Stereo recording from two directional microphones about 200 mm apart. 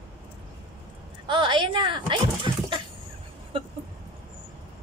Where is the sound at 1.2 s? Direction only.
25° right (ahead or behind).